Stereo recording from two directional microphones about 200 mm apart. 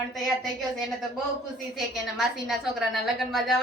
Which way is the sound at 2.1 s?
Centre (ahead or behind).